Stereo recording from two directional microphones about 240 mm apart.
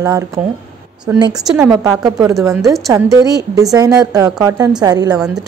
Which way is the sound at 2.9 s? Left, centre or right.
Centre.